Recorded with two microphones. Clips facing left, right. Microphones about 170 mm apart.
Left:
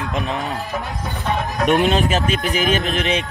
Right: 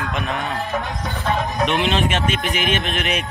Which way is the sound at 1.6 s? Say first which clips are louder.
Left 6 dB; 40° left (ahead or behind).